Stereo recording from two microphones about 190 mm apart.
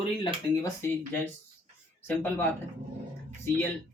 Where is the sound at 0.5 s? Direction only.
15° left (ahead or behind).